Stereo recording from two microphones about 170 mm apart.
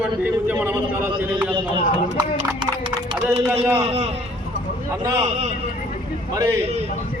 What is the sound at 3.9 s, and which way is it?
Speech, 35° right (ahead or behind).